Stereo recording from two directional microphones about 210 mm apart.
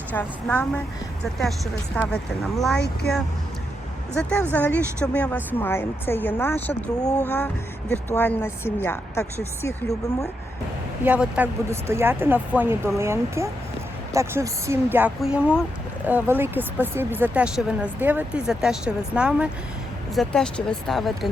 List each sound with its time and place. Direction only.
0.1 s speech: 10° left (ahead or behind)
2.7 s speech: 50° left (ahead or behind)
4.1 s speech: 5° left (ahead or behind)
11.0 s speech: 5° right (ahead or behind)